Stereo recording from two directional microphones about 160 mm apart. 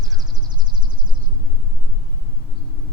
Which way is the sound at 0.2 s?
25° right (ahead or behind).